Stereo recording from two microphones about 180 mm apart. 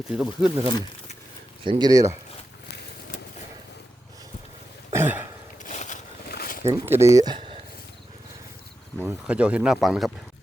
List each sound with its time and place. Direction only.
0.1 s speech: 5° right (ahead or behind)
1.6 s speech: 25° right (ahead or behind)
4.9 s throat clearing: 10° right (ahead or behind)
5.6 s a sound: 45° left (ahead or behind)
6.2 s a sound: 60° left (ahead or behind)
6.7 s speech: 15° right (ahead or behind)
7.2 s speech: 25° right (ahead or behind)
9.0 s speech: 5° right (ahead or behind)